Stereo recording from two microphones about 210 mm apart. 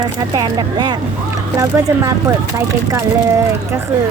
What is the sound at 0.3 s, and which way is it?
Speech, 20° right (ahead or behind).